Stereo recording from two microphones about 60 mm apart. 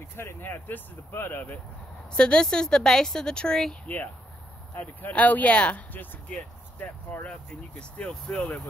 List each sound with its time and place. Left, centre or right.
0.1 s speech: left
2.1 s a woman's voice: centre
3.8 s speech: left
8.1 s a woman's voice: centre